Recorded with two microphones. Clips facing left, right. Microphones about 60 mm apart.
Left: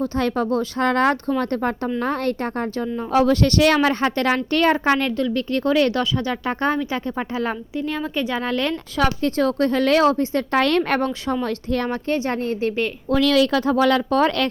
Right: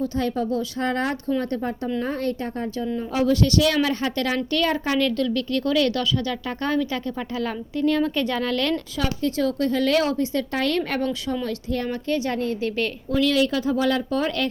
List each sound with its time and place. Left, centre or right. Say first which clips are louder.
0.2 s a woman's voice: left 4 dB; left
7.8 s a woman's voice: right 5 dB; centre
8.4 s speech: left 1 dB; left
9.0 s a woman's voice: left 7 dB; left
13.1 s speech: left 4 dB; left